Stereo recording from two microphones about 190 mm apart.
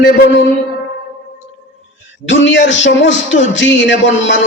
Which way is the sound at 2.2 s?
75° left (ahead or behind).